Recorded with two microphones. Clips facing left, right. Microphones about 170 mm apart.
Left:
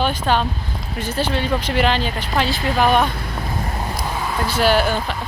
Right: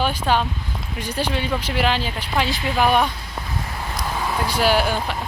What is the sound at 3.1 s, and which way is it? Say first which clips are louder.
Speech: left 5 dB; 60° left (ahead or behind).